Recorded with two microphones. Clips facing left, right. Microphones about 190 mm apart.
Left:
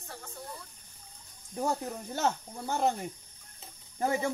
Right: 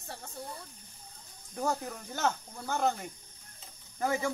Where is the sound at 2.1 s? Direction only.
25° left (ahead or behind).